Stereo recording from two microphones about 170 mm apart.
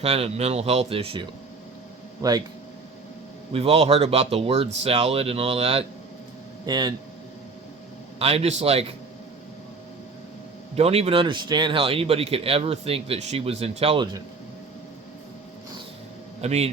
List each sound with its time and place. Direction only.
0.0 s speech: 35° right (ahead or behind)
2.2 s speech: 20° right (ahead or behind)
3.5 s speech: 35° right (ahead or behind)
6.7 s speech: 25° right (ahead or behind)
8.2 s speech: 35° right (ahead or behind)
10.8 s speech: 35° right (ahead or behind)
16.4 s speech: 40° right (ahead or behind)